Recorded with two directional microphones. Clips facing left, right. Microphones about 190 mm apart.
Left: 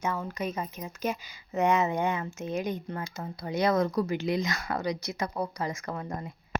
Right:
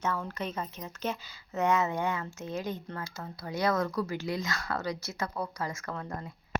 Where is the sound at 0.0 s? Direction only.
10° left (ahead or behind).